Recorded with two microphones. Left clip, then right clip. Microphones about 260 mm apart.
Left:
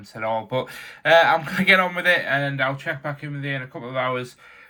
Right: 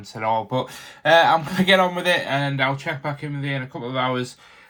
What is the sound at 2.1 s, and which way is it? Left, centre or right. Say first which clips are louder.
Speech: left 1 dB; right.